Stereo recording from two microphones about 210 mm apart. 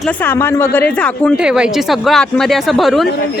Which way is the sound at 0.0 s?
10° left (ahead or behind).